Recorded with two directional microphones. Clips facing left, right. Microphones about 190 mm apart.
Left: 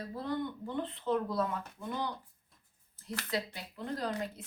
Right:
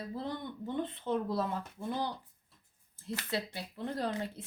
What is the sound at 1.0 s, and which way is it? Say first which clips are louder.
Speech: left 3 dB; 25° right (ahead or behind).